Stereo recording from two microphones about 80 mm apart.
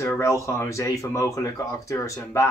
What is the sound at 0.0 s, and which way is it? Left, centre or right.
Speech, left.